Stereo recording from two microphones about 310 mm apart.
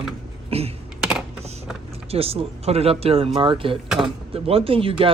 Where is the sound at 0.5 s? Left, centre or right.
Centre.